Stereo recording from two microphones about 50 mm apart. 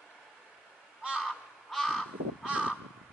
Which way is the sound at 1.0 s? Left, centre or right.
Centre.